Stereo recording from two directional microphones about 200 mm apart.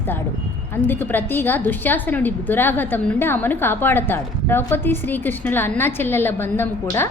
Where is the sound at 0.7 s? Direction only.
10° left (ahead or behind).